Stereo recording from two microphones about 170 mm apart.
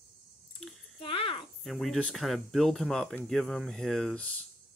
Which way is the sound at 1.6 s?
Centre (ahead or behind).